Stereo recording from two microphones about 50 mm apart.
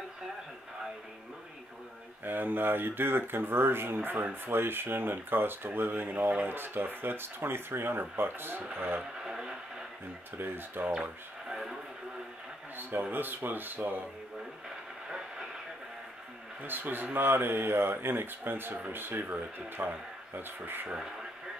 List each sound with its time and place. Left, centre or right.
2.2 s speech: right
9.2 s radio: centre
10.4 s speech: right
11.4 s radio: centre
12.7 s speech: right
15.0 s train: centre
16.6 s speech: right